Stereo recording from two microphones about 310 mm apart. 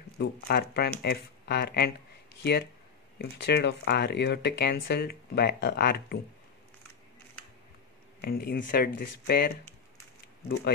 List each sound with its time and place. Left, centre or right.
0.2 s speech: left
8.2 s speech: left